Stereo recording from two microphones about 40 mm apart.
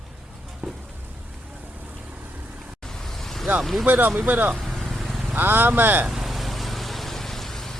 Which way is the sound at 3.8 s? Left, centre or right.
Right.